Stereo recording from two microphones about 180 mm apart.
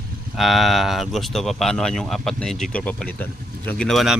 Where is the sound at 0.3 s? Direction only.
Centre (ahead or behind).